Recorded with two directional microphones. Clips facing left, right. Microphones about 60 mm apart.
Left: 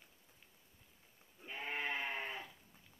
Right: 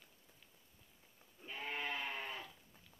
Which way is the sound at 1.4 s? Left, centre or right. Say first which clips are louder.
Left 1 dB; centre.